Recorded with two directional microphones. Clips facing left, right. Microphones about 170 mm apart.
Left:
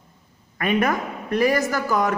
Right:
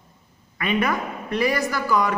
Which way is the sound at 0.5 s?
45° left (ahead or behind).